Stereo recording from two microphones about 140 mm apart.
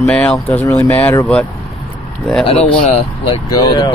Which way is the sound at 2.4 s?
45° left (ahead or behind).